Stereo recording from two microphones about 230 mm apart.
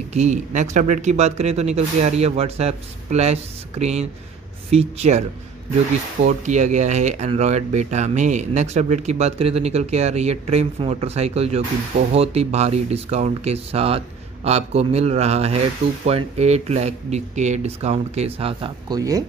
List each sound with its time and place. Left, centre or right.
0.1 s speech: right
6.2 s speech: right; by 19.2 s centre